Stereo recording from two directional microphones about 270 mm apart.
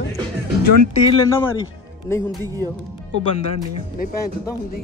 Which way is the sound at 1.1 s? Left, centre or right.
Centre.